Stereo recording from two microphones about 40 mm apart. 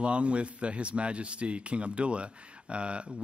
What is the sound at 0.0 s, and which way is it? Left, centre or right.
Speech, right.